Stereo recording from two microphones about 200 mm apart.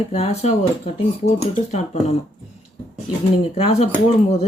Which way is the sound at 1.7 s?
30° left (ahead or behind).